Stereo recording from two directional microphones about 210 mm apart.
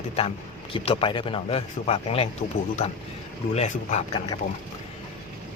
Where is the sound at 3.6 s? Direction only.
30° left (ahead or behind).